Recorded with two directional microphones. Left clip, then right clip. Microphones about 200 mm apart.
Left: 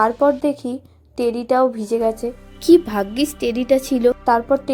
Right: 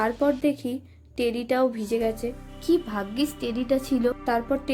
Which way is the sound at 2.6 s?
40° left (ahead or behind).